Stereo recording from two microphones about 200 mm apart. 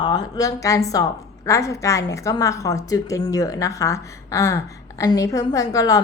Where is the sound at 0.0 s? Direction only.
20° left (ahead or behind).